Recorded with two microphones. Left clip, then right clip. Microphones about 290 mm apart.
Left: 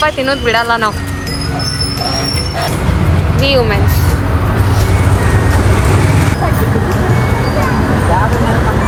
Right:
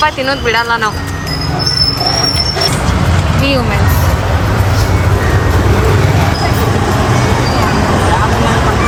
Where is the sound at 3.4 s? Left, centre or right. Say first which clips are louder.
Left 4 dB; centre.